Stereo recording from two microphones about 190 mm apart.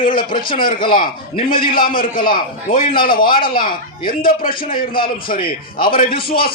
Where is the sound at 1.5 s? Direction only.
50° left (ahead or behind).